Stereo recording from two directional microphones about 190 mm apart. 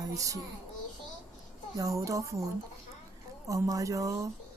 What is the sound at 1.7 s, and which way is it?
Speech, 15° right (ahead or behind).